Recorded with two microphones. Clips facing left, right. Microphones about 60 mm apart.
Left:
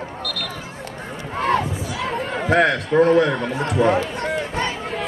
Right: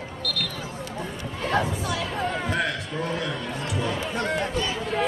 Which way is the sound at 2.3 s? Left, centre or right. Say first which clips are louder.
Left 9 dB; left.